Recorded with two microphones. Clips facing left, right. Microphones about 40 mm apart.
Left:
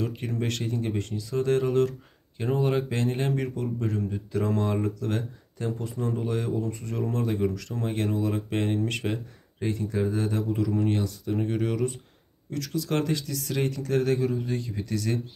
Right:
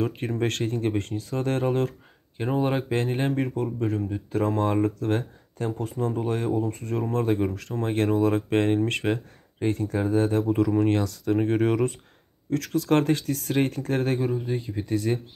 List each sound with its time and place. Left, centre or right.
0.0 s speech: right
3.1 s speech: right
10.9 s speech: right
11.4 s speech: right
14.3 s speech: centre